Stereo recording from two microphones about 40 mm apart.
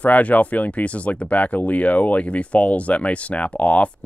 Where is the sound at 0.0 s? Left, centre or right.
Left.